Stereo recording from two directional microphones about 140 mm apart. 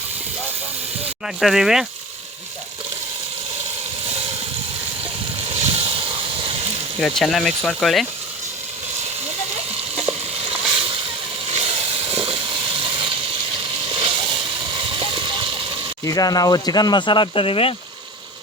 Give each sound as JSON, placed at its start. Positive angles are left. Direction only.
{"t": 1.4, "sound": "speech", "side_deg": 0}
{"t": 5.5, "sound": "vehicle", "side_deg": -45}
{"t": 7.0, "sound": "speech", "side_deg": 0}
{"t": 9.7, "sound": "a sound", "side_deg": -45}
{"t": 10.8, "sound": "boat", "side_deg": -40}
{"t": 11.4, "sound": "a sound", "side_deg": -45}
{"t": 16.0, "sound": "speech", "side_deg": 25}